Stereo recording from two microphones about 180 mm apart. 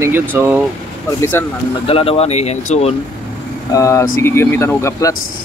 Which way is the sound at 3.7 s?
15° left (ahead or behind).